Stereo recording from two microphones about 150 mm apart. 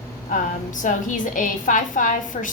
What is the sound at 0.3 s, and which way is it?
A woman's voice, 60° left (ahead or behind).